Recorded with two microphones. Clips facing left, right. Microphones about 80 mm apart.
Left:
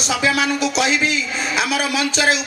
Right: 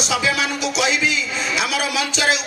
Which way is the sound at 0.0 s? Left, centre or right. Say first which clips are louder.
Left 2 dB; left.